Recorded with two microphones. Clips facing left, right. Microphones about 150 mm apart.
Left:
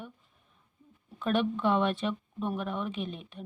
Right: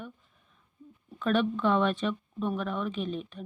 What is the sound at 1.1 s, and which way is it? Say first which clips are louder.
Speech: right 2 dB; 15° left (ahead or behind).